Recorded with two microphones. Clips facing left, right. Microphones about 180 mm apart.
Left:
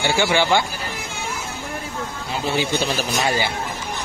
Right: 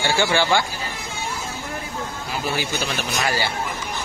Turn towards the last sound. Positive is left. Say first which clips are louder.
# left 2 dB
turn(degrees=20)  # may be behind; listen again after turning